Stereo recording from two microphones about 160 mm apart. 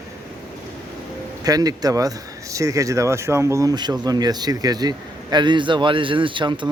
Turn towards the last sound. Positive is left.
turn(degrees=-30)  # may be behind; listen again after turning